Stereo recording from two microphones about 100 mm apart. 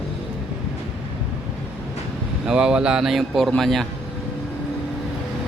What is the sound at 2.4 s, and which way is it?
Speech, 10° right (ahead or behind).